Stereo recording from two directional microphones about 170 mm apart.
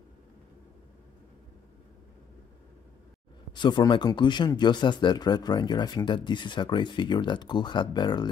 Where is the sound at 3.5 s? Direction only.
25° left (ahead or behind).